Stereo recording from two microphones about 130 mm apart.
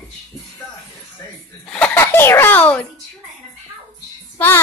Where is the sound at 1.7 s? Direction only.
10° left (ahead or behind).